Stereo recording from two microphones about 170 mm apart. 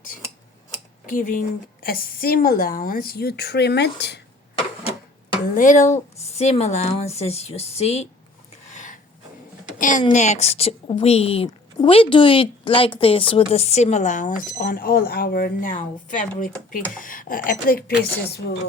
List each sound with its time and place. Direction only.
1.0 s a woman's voice: 50° left (ahead or behind); by 4.2 s 90° left
5.5 s a woman's voice: 45° left (ahead or behind)
8.7 s a sound: 45° left (ahead or behind)
9.7 s a woman's voice: 50° left (ahead or behind)